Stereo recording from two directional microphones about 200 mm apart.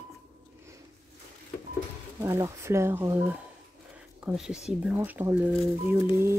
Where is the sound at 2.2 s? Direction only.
15° right (ahead or behind).